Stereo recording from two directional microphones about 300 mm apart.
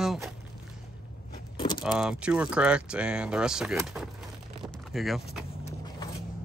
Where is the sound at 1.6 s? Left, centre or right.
Centre.